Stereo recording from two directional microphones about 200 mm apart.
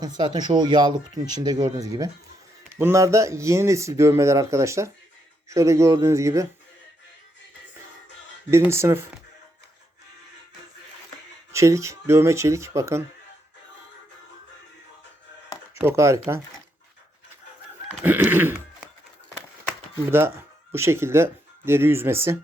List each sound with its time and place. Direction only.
0.0 s speech: 20° right (ahead or behind)
8.4 s speech: 15° right (ahead or behind)
11.5 s speech: 15° right (ahead or behind)
15.8 s speech: 15° right (ahead or behind)
18.0 s a sound: 10° right (ahead or behind)
20.1 s speech: 10° right (ahead or behind)